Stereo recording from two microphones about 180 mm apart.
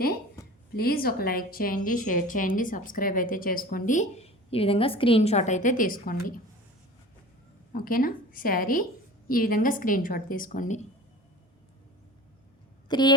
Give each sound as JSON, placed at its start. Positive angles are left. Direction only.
{"t": 0.4, "sound": "a sound", "side_deg": 15}
{"t": 0.7, "sound": "a woman's voice", "side_deg": 55}
{"t": 7.7, "sound": "a woman's voice", "side_deg": 50}
{"t": 12.9, "sound": "speech", "side_deg": 25}